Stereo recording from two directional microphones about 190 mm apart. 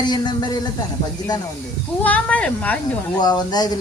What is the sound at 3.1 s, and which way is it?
Speech, 20° left (ahead or behind).